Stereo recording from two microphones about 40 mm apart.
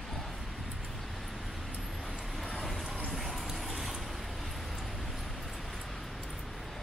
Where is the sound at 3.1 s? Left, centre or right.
Centre.